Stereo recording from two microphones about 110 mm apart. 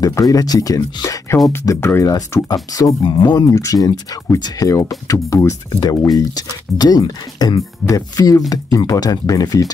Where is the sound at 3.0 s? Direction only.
45° left (ahead or behind).